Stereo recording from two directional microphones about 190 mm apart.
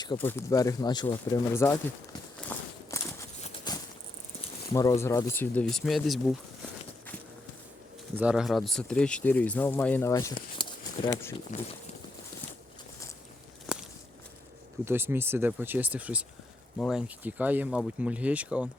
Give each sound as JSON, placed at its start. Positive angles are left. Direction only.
{"t": 0.2, "sound": "speech", "side_deg": 10}
{"t": 2.5, "sound": "walk", "side_deg": 10}
{"t": 2.9, "sound": "a sound", "side_deg": 15}
{"t": 4.7, "sound": "speech", "side_deg": 15}
{"t": 8.1, "sound": "speech", "side_deg": -5}
{"t": 11.5, "sound": "speech", "side_deg": 40}
{"t": 13.7, "sound": "walk", "side_deg": -5}
{"t": 14.8, "sound": "speech", "side_deg": -10}